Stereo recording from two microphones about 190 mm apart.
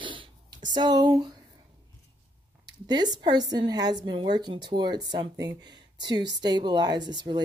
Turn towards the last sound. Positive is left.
turn(degrees=-20)  # may be behind; listen again after turning